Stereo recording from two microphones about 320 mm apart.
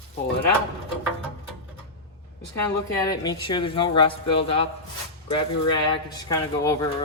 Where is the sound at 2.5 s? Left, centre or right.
Centre.